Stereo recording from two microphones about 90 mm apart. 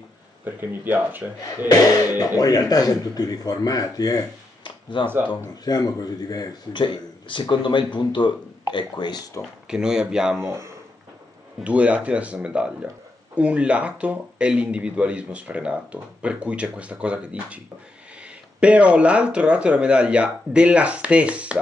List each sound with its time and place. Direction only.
0.5 s speech: 20° right (ahead or behind)
1.7 s speech: 40° left (ahead or behind)
5.0 s speech: 25° right (ahead or behind)
5.3 s speech: 45° left (ahead or behind)
6.7 s speech: 65° left (ahead or behind)
9.7 s speech: 10° right (ahead or behind)
10.3 s speech: 30° right (ahead or behind)
11.6 s speech: 15° right (ahead or behind)
18.6 s speech: 15° right (ahead or behind)